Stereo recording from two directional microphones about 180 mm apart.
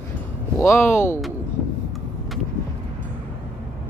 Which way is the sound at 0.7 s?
15° left (ahead or behind).